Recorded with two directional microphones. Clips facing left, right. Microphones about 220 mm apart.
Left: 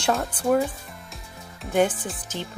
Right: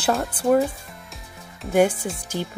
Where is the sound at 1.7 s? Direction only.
10° right (ahead or behind).